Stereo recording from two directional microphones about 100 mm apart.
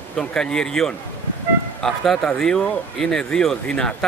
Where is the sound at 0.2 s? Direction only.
10° left (ahead or behind).